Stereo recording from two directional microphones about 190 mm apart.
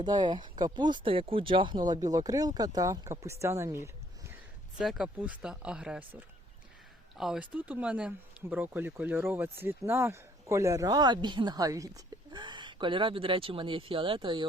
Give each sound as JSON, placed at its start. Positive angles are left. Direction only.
{"t": 0.0, "sound": "speech", "side_deg": -25}
{"t": 4.8, "sound": "speech", "side_deg": 0}